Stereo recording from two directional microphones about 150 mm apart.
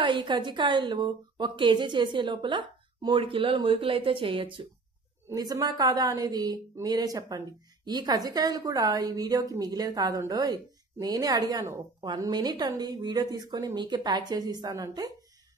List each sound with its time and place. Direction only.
0.0 s a woman's voice: 30° right (ahead or behind)